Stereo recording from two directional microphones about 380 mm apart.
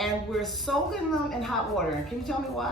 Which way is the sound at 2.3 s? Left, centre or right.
Centre.